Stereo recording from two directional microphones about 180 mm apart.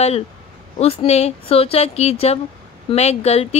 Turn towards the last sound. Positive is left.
turn(degrees=35)  # may be behind; listen again after turning